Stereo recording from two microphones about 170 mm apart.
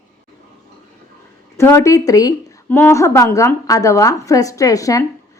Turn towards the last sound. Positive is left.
turn(degrees=20)  # may be behind; listen again after turning